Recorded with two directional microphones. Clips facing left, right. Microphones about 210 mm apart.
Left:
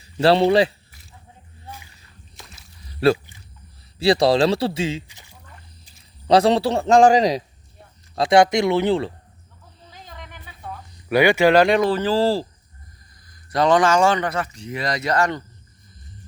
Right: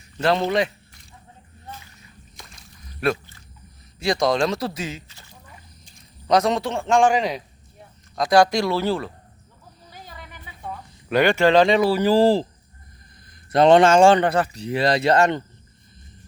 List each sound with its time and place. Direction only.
0.2 s a man's voice: 30° left (ahead or behind)
0.9 s a sound: 5° left (ahead or behind)
3.0 s a man's voice: 30° left (ahead or behind)
5.0 s a sound: 15° left (ahead or behind)
6.2 s a man's voice: 30° left (ahead or behind)
8.1 s speech: 25° left (ahead or behind)
9.9 s a sound: 5° right (ahead or behind)
11.1 s speech: 10° left (ahead or behind)
11.9 s speech: 10° right (ahead or behind)
13.5 s speech: 25° right (ahead or behind)